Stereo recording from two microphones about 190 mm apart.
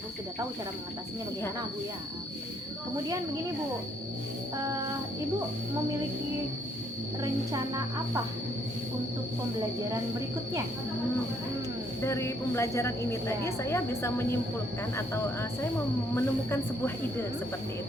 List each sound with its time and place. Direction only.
7.2 s speech: 20° right (ahead or behind)
12.0 s a woman's voice: 15° left (ahead or behind)